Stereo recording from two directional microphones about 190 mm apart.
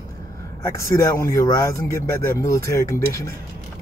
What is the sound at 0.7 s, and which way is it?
Speech, 15° left (ahead or behind).